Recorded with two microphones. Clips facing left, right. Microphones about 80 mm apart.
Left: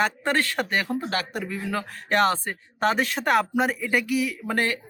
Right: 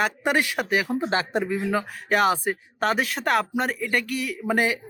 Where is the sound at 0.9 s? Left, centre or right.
Right.